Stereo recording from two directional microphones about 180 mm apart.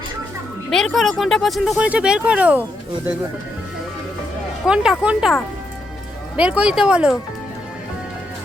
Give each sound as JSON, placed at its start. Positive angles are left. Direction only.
{"t": 0.7, "sound": "speech", "side_deg": 0}
{"t": 4.6, "sound": "speech", "side_deg": -5}